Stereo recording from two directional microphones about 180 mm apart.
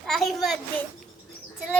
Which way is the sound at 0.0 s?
Centre (ahead or behind).